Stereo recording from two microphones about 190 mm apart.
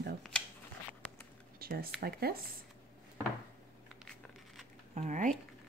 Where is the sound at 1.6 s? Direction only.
50° right (ahead or behind).